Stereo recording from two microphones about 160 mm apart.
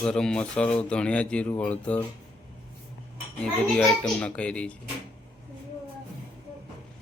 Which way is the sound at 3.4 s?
5° left (ahead or behind).